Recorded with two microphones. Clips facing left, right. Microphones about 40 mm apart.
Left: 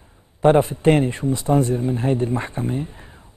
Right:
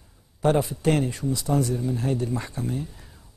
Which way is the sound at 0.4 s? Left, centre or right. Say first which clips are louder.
Left 7 dB; left.